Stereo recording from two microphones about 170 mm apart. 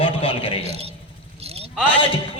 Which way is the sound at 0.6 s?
35° right (ahead or behind).